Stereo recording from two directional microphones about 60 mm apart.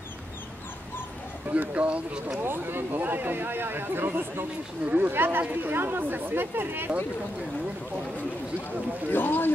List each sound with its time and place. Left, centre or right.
1.5 s speech: right
2.4 s speech: right
9.1 s speech: left